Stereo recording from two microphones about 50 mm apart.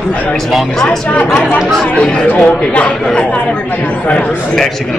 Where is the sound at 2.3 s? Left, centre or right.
Left.